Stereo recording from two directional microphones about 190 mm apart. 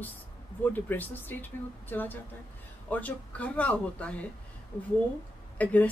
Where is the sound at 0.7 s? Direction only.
10° left (ahead or behind).